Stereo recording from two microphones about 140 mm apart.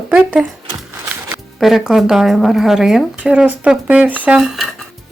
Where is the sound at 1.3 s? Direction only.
Centre (ahead or behind).